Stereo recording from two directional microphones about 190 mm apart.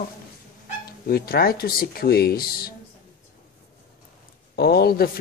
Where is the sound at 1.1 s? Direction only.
55° left (ahead or behind).